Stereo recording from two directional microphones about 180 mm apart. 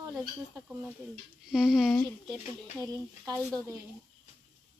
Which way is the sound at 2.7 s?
15° right (ahead or behind).